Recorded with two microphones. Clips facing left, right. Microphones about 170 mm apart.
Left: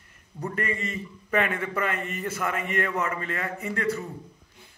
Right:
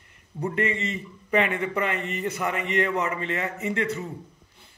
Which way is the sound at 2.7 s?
20° right (ahead or behind).